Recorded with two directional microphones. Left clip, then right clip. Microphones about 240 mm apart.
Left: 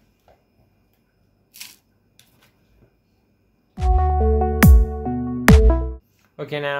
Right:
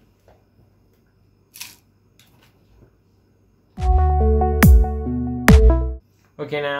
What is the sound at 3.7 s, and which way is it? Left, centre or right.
Music, centre.